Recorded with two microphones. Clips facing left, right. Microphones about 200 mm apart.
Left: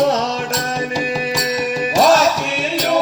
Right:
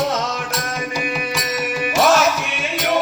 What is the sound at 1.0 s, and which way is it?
Music, 35° left (ahead or behind).